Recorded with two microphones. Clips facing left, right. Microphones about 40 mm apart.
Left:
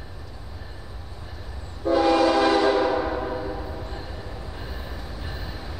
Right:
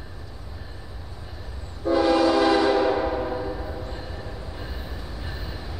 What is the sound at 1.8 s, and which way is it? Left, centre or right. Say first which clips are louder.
Train horn: even; centre.